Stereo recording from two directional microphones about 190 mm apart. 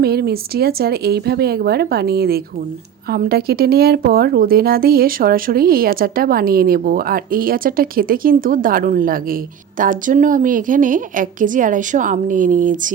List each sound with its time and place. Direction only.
0.0 s speech: 55° right (ahead or behind)